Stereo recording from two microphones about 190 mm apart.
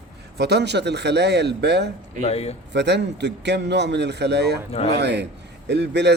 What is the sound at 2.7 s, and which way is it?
Speech, 65° right (ahead or behind).